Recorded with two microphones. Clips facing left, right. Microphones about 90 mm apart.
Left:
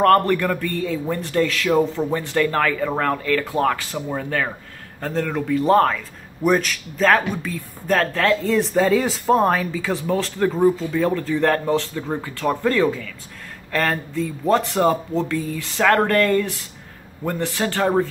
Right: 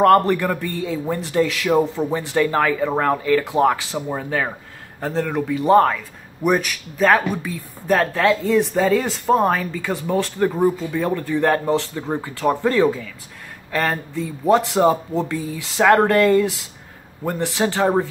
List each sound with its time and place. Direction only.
0.0 s a man's voice: 15° right (ahead or behind)